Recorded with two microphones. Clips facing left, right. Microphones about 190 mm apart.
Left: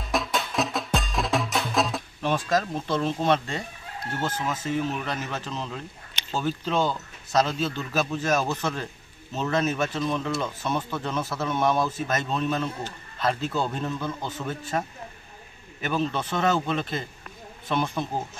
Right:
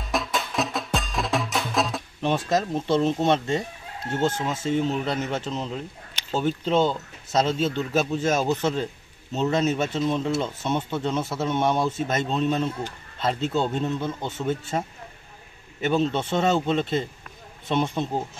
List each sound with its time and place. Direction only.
0.0 s music: centre (ahead or behind)
2.2 s speech: 20° right (ahead or behind)